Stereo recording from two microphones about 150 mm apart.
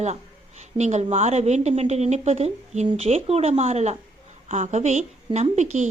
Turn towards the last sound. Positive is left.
turn(degrees=-50)  # may be behind; listen again after turning